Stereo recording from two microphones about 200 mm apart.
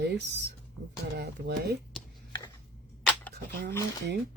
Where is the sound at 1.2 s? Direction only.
55° right (ahead or behind).